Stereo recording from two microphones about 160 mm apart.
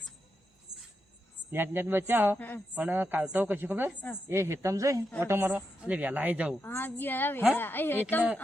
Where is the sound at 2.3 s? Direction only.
10° left (ahead or behind).